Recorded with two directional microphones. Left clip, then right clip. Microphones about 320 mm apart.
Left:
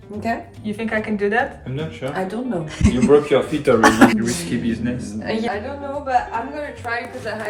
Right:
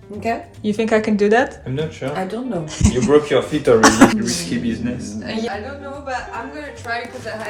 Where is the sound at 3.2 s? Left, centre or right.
Right.